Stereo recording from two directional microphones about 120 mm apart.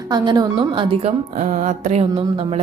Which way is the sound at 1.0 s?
85° right.